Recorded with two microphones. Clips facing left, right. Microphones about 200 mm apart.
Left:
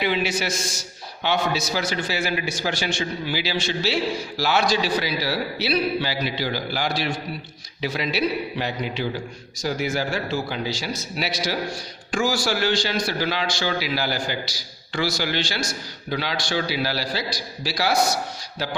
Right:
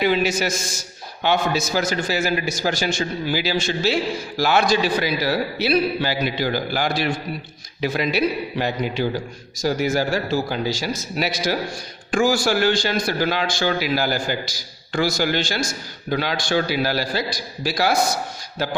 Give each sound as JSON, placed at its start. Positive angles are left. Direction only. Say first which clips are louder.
{"t": 0.0, "sound": "a man's voice", "louder": "right 4 dB", "side_deg": -45}